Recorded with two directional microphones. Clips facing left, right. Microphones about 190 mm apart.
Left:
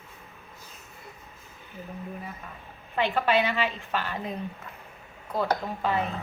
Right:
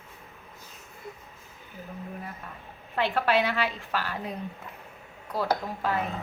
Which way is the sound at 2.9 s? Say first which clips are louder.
Left 1 dB; centre (ahead or behind).